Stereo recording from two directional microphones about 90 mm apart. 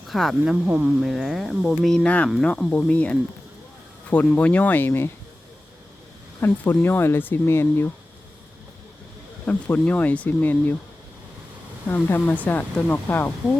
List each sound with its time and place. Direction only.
0.1 s speech: centre (ahead or behind)
0.5 s speech: 10° right (ahead or behind)
2.0 s speech: 15° left (ahead or behind)
4.4 s speech: 15° left (ahead or behind)
6.4 s speech: 25° left (ahead or behind)
9.5 s speech: 20° left (ahead or behind)
11.9 s speech: 25° left (ahead or behind)